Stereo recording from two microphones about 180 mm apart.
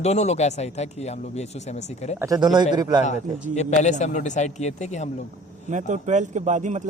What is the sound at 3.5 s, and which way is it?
Speech, 40° left (ahead or behind).